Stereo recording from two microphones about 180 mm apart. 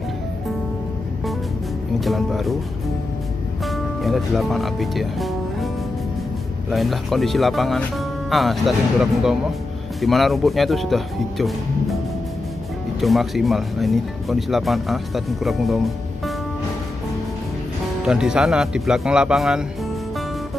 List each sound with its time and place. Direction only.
2.0 s speech: centre (ahead or behind)
3.6 s speech: centre (ahead or behind)
6.7 s speech: centre (ahead or behind)
13.0 s speech: centre (ahead or behind)
18.0 s speech: 5° right (ahead or behind)